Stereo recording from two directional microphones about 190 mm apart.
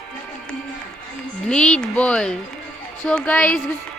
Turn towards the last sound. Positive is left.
turn(degrees=5)  # may be behind; listen again after turning